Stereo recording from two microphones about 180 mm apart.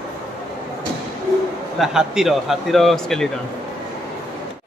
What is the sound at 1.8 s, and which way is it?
A man's voice, centre (ahead or behind).